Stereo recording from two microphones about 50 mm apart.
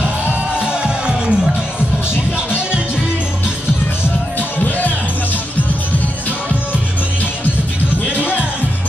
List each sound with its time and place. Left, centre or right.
0.6 s music: centre
2.3 s music: right
4.4 s music: left